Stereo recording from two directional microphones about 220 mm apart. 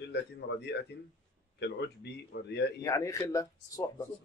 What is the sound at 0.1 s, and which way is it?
Speech, 50° left (ahead or behind).